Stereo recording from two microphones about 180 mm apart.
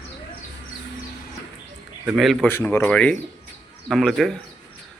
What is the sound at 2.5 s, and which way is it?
Speech, 15° left (ahead or behind).